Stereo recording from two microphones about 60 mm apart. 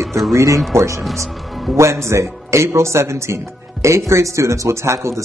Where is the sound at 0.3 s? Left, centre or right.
Right.